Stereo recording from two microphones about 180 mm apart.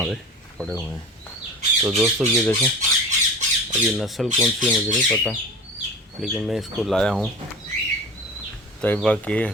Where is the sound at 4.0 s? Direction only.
Centre (ahead or behind).